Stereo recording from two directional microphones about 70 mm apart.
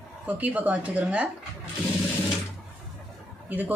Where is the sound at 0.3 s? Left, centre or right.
Right.